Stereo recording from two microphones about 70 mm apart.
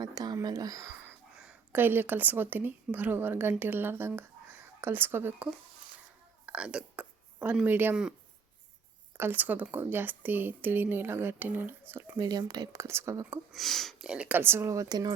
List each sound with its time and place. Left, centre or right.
0.0 s speech: right
1.7 s speech: right
6.4 s whispering: centre
7.6 s speech: right
9.1 s speech: right
12.1 s speech: right
12.7 s speech: right
13.5 s speech: centre
14.0 s speech: centre
14.3 s speech: right
14.8 s speech: right